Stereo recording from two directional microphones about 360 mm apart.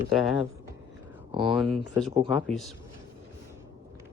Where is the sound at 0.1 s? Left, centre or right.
Centre.